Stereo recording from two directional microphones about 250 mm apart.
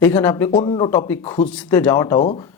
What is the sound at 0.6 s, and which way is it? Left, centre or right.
Speech, left.